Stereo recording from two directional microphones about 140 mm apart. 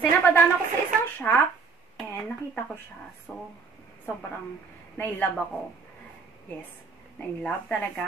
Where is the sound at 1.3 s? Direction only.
10° left (ahead or behind).